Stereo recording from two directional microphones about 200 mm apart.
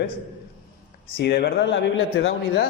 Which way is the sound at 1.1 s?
50° left (ahead or behind).